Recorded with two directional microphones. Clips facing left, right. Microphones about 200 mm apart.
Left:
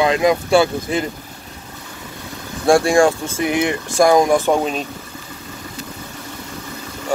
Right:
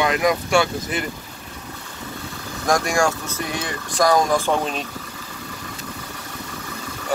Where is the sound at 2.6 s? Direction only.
30° left (ahead or behind).